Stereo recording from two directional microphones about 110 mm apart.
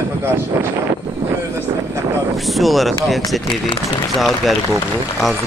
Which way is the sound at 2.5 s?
Centre (ahead or behind).